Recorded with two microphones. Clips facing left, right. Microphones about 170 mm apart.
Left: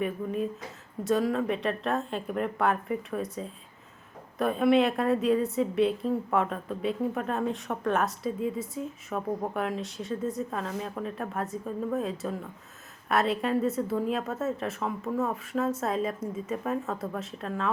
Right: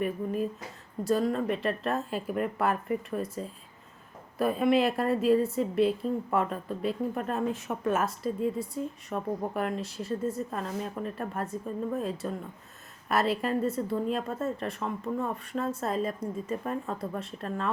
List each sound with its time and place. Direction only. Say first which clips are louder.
0.0 s a woman's voice: even; centre (ahead or behind)